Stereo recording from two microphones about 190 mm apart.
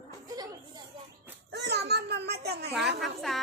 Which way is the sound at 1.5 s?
60° right (ahead or behind).